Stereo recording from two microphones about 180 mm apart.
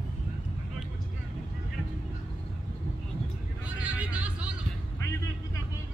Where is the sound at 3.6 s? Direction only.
5° right (ahead or behind).